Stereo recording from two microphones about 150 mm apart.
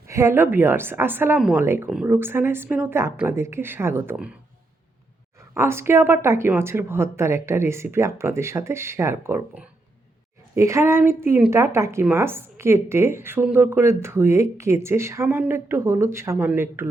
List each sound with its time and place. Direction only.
0.1 s a woman's voice: 20° right (ahead or behind)
1.6 s a woman's voice: 15° right (ahead or behind)
5.5 s a woman's voice: 15° right (ahead or behind)